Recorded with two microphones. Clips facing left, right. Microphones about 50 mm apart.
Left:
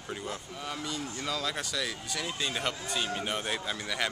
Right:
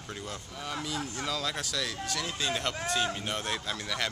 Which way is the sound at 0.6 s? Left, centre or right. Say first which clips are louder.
Right 2 dB; centre.